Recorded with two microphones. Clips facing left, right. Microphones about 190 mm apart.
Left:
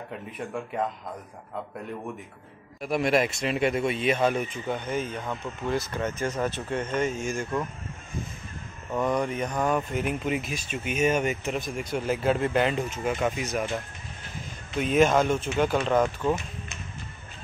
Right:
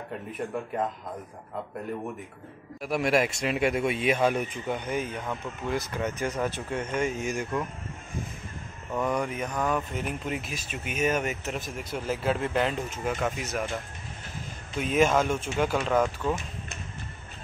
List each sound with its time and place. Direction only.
0.3 s speech: centre (ahead or behind)
2.8 s speech: 5° right (ahead or behind)
8.9 s speech: 5° right (ahead or behind)
9.5 s speech: 10° left (ahead or behind)
14.8 s speech: 5° right (ahead or behind)